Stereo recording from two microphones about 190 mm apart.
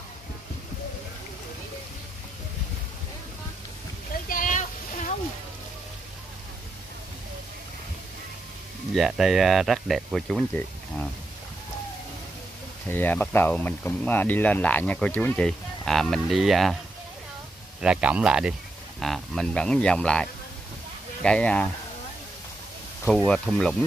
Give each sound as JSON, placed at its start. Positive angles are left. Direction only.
{"t": 4.3, "sound": "a sound", "side_deg": 45}
{"t": 8.9, "sound": "speech", "side_deg": 0}
{"t": 12.8, "sound": "speech", "side_deg": 10}
{"t": 17.8, "sound": "speech", "side_deg": -5}
{"t": 23.0, "sound": "speech", "side_deg": 5}